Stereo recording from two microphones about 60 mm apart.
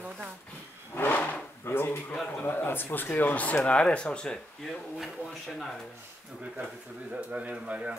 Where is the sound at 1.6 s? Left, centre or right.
Left; by 4.6 s centre.